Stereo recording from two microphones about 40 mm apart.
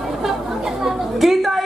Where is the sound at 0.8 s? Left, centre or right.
Centre.